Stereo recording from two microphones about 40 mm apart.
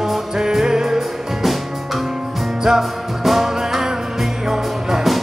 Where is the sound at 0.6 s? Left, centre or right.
Centre.